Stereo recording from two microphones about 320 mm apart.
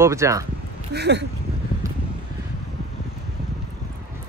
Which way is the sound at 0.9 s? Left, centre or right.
Right.